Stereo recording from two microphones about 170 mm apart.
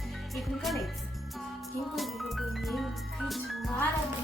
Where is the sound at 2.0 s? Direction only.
Centre (ahead or behind).